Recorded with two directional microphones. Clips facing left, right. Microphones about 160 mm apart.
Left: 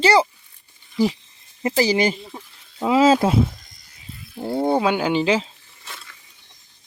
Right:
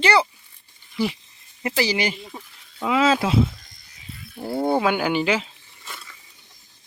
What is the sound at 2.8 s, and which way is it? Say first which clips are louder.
Speech: left 4 dB; 35° left (ahead or behind).